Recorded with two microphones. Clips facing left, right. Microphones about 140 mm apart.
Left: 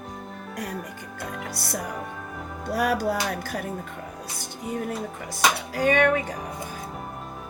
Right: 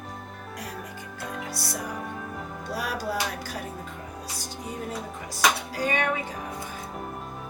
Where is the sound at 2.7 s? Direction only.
55° left (ahead or behind).